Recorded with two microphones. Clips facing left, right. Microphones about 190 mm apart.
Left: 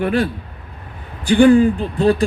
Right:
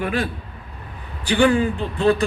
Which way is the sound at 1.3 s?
45° left (ahead or behind).